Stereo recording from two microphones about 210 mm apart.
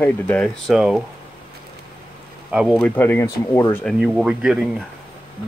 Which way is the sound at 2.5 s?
5° right (ahead or behind).